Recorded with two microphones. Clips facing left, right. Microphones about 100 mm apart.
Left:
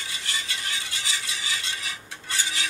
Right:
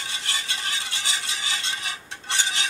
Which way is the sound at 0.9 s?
25° right (ahead or behind).